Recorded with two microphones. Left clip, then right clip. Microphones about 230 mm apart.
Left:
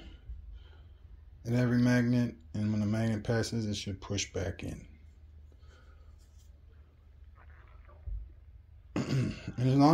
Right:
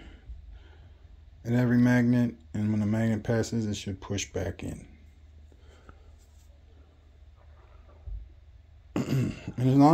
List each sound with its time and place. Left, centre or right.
1.4 s speech: centre
8.9 s speech: centre